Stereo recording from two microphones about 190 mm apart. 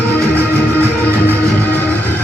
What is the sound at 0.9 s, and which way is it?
Music, 10° left (ahead or behind).